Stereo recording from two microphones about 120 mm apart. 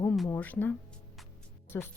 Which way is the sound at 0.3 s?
15° left (ahead or behind).